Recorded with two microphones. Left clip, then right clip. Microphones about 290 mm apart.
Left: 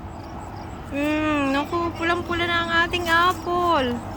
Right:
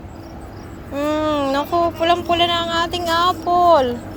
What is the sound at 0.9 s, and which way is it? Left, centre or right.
Speech, centre.